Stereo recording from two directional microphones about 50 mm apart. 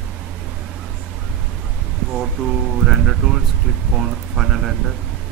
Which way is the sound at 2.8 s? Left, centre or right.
Centre.